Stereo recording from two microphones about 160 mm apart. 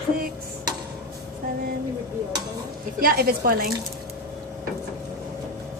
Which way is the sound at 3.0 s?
75° right (ahead or behind).